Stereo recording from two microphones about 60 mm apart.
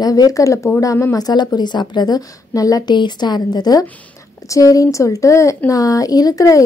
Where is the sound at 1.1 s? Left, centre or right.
Left.